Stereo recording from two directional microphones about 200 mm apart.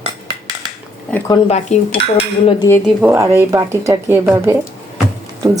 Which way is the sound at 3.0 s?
15° right (ahead or behind).